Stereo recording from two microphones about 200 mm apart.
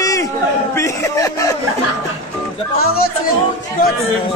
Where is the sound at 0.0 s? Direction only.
15° left (ahead or behind).